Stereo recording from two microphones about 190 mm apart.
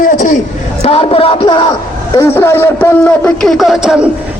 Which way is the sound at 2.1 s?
15° left (ahead or behind).